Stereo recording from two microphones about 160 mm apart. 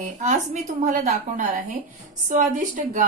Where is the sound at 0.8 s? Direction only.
45° right (ahead or behind).